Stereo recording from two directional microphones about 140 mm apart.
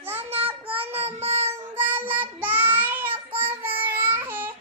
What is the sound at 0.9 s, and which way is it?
Child singing, 50° right (ahead or behind).